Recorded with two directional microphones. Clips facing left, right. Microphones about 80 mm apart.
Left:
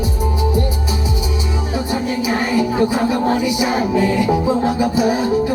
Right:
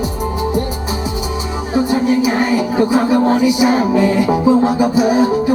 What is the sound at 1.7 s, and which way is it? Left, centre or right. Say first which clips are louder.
Music: right 8 dB; right.